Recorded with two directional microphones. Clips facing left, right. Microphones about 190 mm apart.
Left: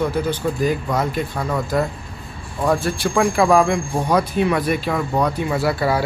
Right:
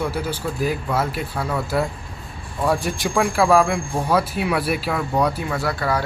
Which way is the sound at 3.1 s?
5° right (ahead or behind).